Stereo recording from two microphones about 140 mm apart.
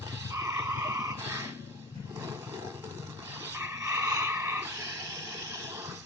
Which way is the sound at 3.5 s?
20° right (ahead or behind).